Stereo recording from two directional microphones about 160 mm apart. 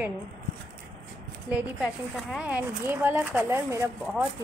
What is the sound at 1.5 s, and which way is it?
Speech, 5° right (ahead or behind).